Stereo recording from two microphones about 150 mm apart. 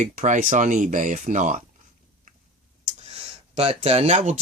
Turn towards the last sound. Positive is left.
turn(degrees=-50)  # may be behind; listen again after turning